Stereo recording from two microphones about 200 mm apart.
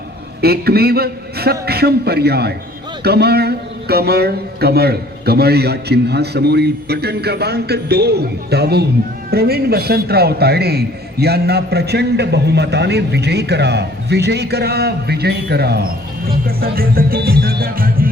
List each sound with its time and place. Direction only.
0.4 s a man's voice: 50° right (ahead or behind)